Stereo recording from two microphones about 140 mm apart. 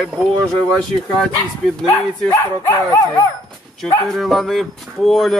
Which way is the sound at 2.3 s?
20° left (ahead or behind).